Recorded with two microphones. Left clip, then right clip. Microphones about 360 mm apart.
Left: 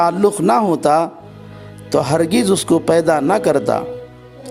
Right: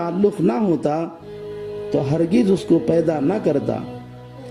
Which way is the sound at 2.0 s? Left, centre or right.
Left.